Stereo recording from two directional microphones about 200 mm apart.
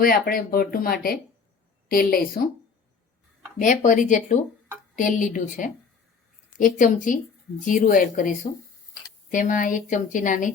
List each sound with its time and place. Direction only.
0.0 s speech: 45° left (ahead or behind)
3.6 s a woman's voice: 40° left (ahead or behind)
9.3 s a woman's voice: 40° left (ahead or behind)